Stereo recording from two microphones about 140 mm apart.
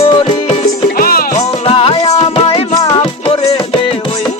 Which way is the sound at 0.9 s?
90° left.